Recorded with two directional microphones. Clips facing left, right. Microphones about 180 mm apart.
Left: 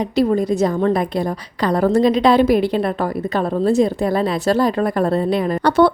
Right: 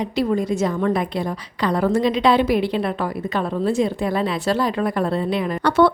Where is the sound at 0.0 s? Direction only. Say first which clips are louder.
Left 4 dB; 40° left (ahead or behind).